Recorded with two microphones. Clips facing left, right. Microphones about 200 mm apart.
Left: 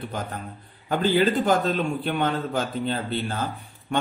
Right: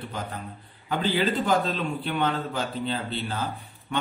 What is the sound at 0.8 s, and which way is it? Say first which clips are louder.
A man's voice: left 4 dB; 50° left (ahead or behind).